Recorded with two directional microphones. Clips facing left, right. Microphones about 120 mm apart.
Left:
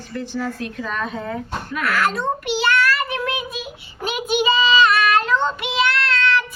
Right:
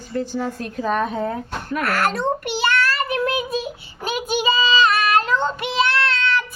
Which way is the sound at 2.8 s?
35° right (ahead or behind).